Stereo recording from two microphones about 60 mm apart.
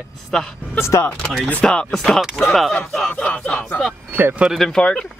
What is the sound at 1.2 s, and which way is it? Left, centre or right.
Speech, centre.